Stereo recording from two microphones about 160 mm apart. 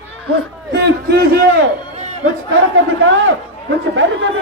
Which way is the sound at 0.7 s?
90° right.